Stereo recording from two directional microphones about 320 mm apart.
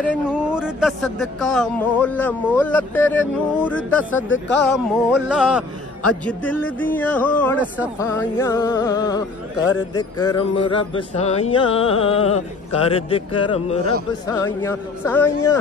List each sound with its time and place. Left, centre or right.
0.1 s speech: centre
4.3 s speech: left
4.7 s speech: centre
8.0 s music: centre